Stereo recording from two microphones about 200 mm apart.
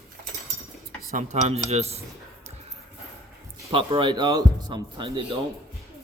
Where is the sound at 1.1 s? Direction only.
35° right (ahead or behind).